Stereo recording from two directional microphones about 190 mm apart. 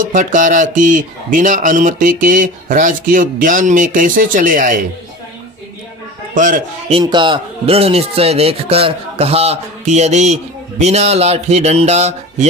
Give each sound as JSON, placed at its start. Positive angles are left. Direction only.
{"t": 0.0, "sound": "speech", "side_deg": -40}
{"t": 6.3, "sound": "speech", "side_deg": -45}
{"t": 6.9, "sound": "speech", "side_deg": -25}